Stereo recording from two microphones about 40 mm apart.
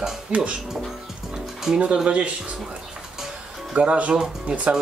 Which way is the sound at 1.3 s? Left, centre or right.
Centre.